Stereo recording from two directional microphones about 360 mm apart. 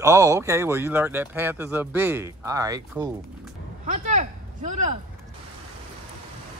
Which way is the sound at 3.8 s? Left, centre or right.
Right.